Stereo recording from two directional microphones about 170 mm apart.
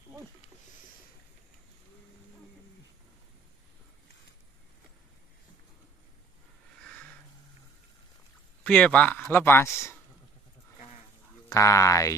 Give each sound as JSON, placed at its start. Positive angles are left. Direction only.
{"t": 6.8, "sound": "a sound", "side_deg": 5}
{"t": 8.6, "sound": "speech", "side_deg": 5}
{"t": 11.4, "sound": "speech", "side_deg": 15}